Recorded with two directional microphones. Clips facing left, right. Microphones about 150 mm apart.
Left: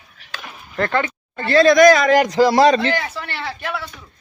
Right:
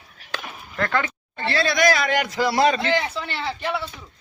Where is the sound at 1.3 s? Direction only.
45° left (ahead or behind).